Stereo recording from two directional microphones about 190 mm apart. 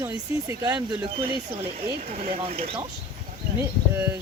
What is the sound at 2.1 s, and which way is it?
Speech, 30° right (ahead or behind).